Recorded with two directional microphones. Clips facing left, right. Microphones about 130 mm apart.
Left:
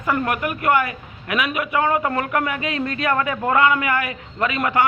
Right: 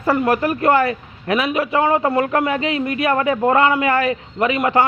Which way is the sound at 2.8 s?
15° right (ahead or behind).